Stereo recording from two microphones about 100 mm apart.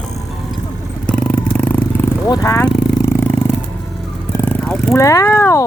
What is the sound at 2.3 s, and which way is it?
Speech, 35° left (ahead or behind).